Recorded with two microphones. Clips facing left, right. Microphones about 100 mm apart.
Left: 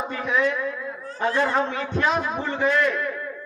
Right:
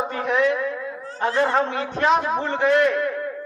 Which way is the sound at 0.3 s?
35° right (ahead or behind).